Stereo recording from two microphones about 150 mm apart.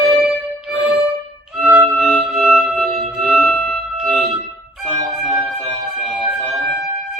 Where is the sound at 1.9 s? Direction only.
5° left (ahead or behind).